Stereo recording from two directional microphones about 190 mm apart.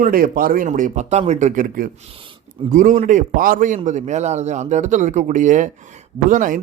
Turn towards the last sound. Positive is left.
turn(degrees=-45)  # may be behind; listen again after turning